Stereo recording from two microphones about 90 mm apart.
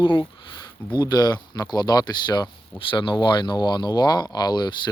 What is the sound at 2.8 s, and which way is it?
Speech, 70° left (ahead or behind).